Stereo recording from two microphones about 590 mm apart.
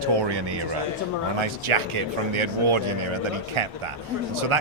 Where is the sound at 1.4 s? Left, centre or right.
Right.